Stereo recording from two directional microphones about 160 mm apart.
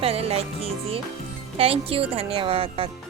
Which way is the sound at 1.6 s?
35° right (ahead or behind).